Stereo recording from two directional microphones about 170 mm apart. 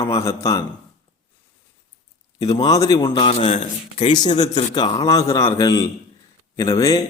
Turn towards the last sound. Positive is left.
turn(degrees=20)  # may be behind; listen again after turning